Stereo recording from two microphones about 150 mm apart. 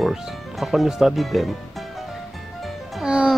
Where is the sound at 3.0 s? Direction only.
5° right (ahead or behind).